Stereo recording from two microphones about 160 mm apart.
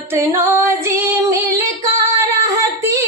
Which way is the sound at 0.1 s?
15° right (ahead or behind).